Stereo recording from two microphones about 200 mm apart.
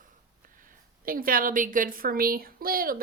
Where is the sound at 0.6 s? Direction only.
45° right (ahead or behind).